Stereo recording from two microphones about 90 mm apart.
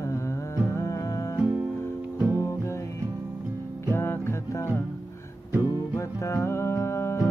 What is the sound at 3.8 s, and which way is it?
Music, 30° left (ahead or behind).